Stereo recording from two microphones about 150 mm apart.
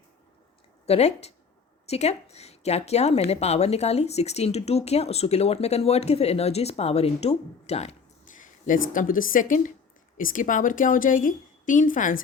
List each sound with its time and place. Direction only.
0.9 s speech: 45° left (ahead or behind)
8.4 s a woman's voice: 60° left (ahead or behind)